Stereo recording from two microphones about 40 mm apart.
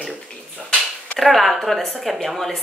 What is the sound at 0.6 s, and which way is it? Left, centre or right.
Speech, centre.